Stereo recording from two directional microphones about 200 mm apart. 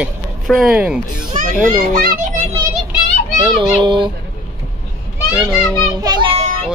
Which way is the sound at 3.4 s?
25° right (ahead or behind).